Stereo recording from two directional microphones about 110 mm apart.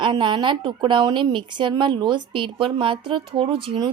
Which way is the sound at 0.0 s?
45° right (ahead or behind).